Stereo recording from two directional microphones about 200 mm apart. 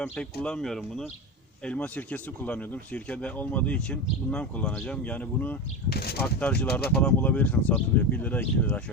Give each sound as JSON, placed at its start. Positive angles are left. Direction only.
{"t": 0.0, "sound": "speech", "side_deg": 5}
{"t": 5.9, "sound": "speech", "side_deg": 50}
{"t": 6.1, "sound": "speech", "side_deg": 5}